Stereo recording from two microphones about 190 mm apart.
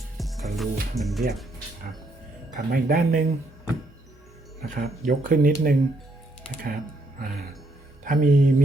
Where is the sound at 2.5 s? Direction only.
45° right (ahead or behind).